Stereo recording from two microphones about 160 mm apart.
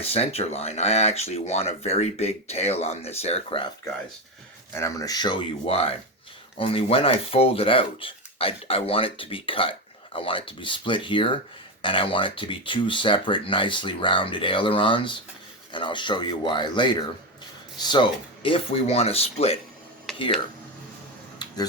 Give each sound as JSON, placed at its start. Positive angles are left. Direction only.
{"t": 0.0, "sound": "speech", "side_deg": 40}
{"t": 4.7, "sound": "speech", "side_deg": 20}
{"t": 5.6, "sound": "speech", "side_deg": 40}
{"t": 21.3, "sound": "a sound", "side_deg": 25}